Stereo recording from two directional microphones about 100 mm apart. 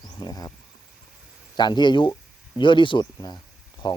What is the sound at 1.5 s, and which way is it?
Speech, 45° left (ahead or behind).